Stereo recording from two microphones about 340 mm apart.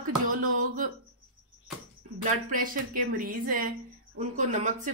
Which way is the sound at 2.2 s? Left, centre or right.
Right.